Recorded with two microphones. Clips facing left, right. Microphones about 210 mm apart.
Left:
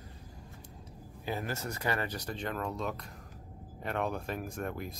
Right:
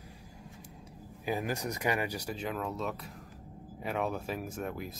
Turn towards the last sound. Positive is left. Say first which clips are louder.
# even
turn(degrees=-5)  # may be behind; listen again after turning